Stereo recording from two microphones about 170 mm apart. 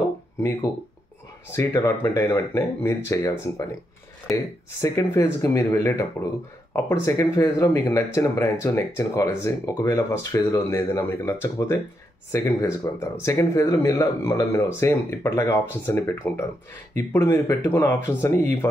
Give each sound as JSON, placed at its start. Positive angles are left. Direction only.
{"t": 1.5, "sound": "speech", "side_deg": 20}
{"t": 4.8, "sound": "speech", "side_deg": 20}